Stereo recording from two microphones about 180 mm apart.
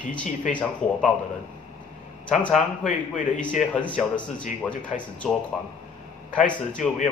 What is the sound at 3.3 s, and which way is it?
Speech, 5° left (ahead or behind).